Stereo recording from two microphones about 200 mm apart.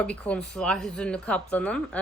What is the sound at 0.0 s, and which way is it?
A woman's voice, 5° left (ahead or behind).